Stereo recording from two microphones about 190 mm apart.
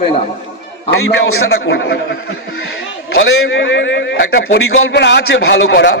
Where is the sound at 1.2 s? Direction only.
65° left (ahead or behind).